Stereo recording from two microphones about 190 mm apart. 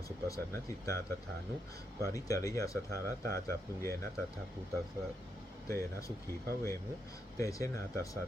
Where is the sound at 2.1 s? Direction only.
15° left (ahead or behind).